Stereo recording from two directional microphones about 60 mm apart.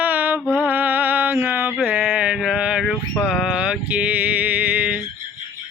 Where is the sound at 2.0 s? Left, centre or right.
Right.